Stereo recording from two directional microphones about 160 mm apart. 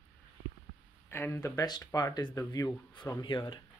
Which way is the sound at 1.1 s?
15° left (ahead or behind).